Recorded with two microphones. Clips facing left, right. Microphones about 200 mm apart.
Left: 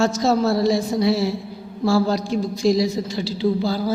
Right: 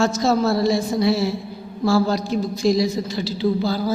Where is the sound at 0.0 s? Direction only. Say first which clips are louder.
Even; 35° left (ahead or behind).